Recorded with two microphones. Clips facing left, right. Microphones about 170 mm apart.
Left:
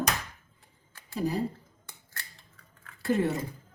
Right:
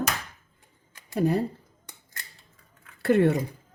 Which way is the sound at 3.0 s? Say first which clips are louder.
Right 6 dB; 65° right (ahead or behind).